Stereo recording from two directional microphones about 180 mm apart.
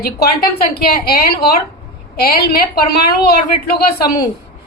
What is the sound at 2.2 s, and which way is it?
A woman's voice, 60° left (ahead or behind).